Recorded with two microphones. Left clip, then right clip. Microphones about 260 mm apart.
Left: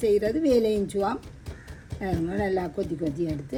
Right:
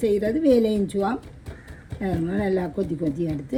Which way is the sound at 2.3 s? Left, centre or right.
Centre.